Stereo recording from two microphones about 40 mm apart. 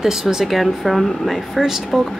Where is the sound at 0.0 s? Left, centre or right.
Centre.